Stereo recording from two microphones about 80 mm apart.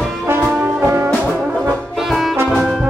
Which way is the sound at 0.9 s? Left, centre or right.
Right.